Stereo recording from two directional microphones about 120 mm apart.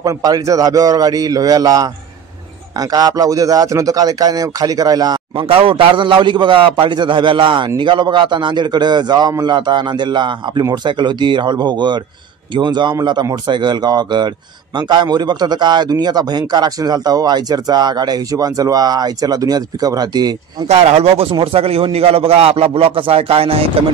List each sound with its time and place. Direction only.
0.0 s a man's voice: 30° right (ahead or behind)
5.4 s a man's voice: 50° right (ahead or behind); by 20.3 s 35° right (ahead or behind)
20.6 s a man's voice: 60° right (ahead or behind)